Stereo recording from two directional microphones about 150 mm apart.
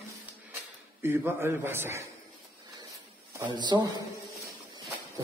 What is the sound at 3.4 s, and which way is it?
Speech, 30° right (ahead or behind).